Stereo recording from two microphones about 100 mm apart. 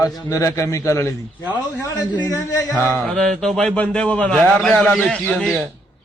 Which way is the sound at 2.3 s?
35° left (ahead or behind).